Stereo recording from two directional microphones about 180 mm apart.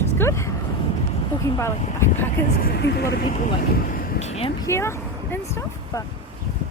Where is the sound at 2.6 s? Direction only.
65° left (ahead or behind).